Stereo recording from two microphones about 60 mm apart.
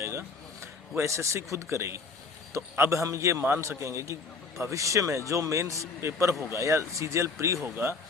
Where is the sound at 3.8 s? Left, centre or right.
Right.